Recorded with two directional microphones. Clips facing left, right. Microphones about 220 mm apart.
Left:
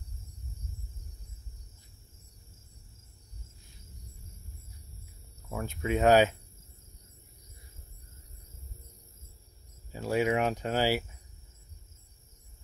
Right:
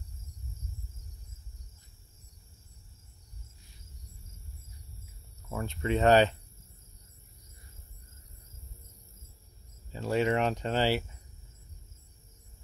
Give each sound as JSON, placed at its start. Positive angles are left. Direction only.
{"t": 5.5, "sound": "speech", "side_deg": 0}
{"t": 9.9, "sound": "speech", "side_deg": 10}